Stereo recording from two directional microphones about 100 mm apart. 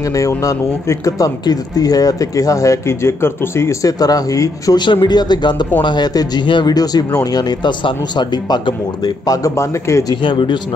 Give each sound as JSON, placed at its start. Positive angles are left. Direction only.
{"t": 0.1, "sound": "speech", "side_deg": 35}
{"t": 5.0, "sound": "speech", "side_deg": 45}
{"t": 10.2, "sound": "speech", "side_deg": 55}